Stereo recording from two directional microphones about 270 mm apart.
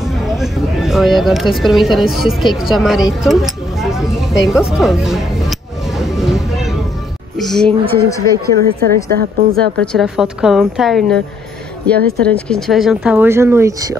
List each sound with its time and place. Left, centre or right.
0.0 s speech: centre
3.3 s a sound: centre
4.7 s music: centre
7.3 s speech: centre
8.6 s a woman's voice: right
9.8 s speech: centre